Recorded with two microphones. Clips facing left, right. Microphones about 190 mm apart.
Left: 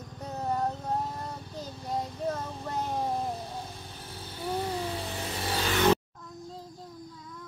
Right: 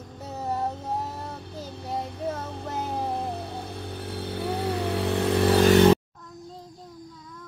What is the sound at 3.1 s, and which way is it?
Vehicle, 65° right (ahead or behind).